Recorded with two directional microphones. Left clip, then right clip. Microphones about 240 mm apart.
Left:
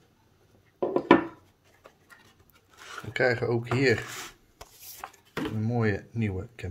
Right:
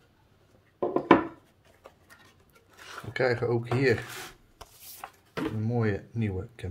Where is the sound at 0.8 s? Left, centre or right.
Left.